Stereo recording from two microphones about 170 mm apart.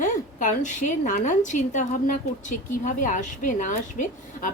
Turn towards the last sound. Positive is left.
turn(degrees=50)  # may be behind; listen again after turning